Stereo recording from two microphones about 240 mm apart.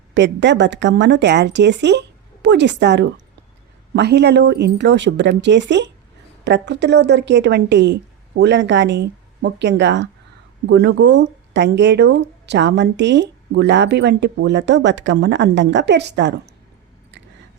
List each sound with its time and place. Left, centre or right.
0.1 s speech: right